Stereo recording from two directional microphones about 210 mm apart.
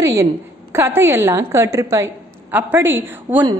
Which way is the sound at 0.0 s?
15° right (ahead or behind).